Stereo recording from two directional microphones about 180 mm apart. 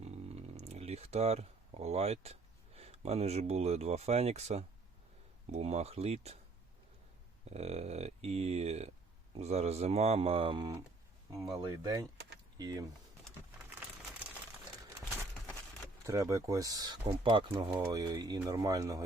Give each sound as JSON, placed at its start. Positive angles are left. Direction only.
{"t": 0.0, "sound": "speech", "side_deg": -35}
{"t": 7.5, "sound": "speech", "side_deg": -35}
{"t": 11.5, "sound": "speech", "side_deg": -20}
{"t": 16.0, "sound": "speech", "side_deg": -15}